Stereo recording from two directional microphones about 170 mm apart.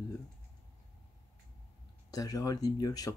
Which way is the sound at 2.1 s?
20° left (ahead or behind).